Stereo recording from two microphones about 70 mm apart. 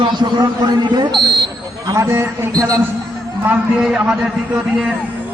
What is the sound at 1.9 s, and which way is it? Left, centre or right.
Speech, right.